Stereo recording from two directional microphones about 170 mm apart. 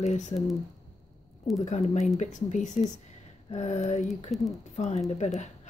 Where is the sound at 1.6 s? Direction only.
45° left (ahead or behind).